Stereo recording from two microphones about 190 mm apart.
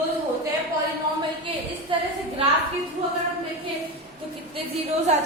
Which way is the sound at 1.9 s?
25° right (ahead or behind).